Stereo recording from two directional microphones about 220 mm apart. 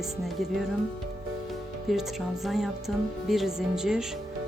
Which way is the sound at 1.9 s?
Centre (ahead or behind).